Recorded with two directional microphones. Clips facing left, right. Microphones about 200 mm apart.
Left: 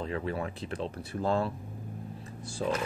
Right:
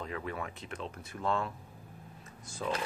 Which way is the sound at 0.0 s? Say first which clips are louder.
Left 5 dB; 30° left (ahead or behind).